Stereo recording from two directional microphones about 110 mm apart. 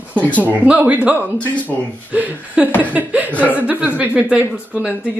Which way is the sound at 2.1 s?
15° right (ahead or behind).